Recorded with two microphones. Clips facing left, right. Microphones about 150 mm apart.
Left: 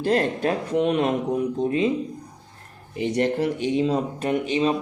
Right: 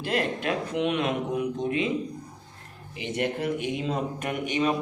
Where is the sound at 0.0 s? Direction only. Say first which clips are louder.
Left 6 dB; 40° left (ahead or behind).